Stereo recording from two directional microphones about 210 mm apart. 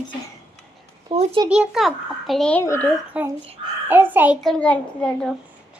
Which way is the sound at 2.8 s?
5° right (ahead or behind).